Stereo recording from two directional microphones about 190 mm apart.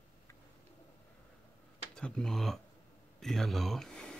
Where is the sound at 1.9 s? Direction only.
5° left (ahead or behind).